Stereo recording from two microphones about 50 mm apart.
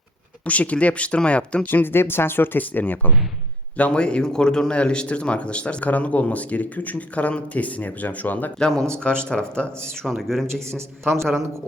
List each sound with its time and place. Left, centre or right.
0.4 s speech: left
1.6 s speech: left
3.8 s a man's voice: left
8.5 s a man's voice: centre
10.4 s a man's voice: right